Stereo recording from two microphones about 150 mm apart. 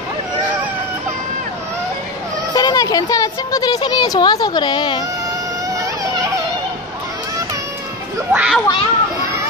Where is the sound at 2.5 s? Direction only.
25° left (ahead or behind).